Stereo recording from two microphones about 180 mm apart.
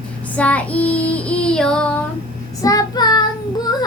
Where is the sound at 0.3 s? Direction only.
10° left (ahead or behind).